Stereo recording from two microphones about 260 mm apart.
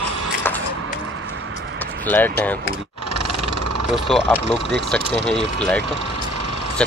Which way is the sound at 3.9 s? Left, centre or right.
Centre.